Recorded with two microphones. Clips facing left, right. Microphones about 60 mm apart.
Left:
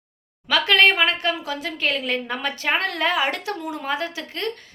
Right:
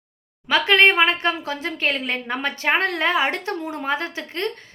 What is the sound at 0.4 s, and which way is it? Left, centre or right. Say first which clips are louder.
A woman's voice: right 1 dB; right.